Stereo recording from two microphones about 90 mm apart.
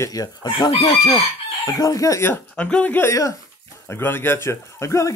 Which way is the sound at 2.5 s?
15° left (ahead or behind).